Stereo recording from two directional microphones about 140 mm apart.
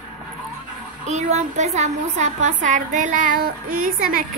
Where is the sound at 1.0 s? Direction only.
55° right (ahead or behind); by 4.2 s 90° right.